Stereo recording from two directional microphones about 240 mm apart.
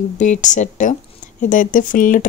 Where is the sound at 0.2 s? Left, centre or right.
Left.